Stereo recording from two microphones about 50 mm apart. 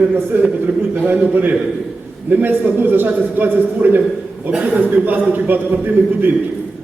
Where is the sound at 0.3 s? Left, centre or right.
Right.